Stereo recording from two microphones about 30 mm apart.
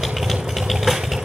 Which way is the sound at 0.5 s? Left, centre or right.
Centre.